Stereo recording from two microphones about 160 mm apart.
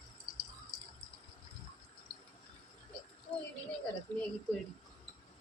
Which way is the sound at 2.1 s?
70° right (ahead or behind).